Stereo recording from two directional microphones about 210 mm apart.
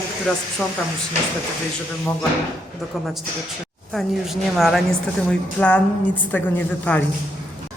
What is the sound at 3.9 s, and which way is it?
Speech, centre (ahead or behind).